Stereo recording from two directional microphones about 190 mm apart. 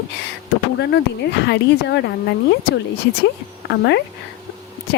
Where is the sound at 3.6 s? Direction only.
65° left (ahead or behind).